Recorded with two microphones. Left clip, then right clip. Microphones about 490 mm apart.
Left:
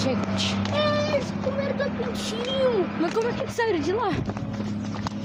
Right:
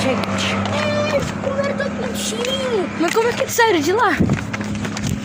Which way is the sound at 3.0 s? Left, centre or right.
Left.